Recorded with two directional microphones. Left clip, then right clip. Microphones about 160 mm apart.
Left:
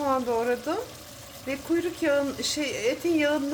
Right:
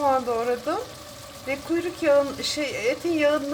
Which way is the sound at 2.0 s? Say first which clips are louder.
Right 9 dB; 15° left (ahead or behind).